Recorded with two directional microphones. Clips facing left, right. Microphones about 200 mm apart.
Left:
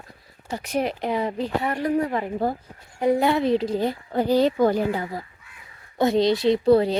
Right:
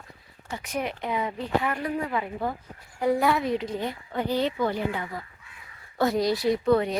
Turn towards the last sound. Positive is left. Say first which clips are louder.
# left 5 dB
turn(degrees=30)  # may be behind; listen again after turning